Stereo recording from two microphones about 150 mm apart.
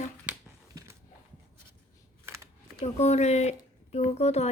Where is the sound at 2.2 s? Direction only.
20° right (ahead or behind).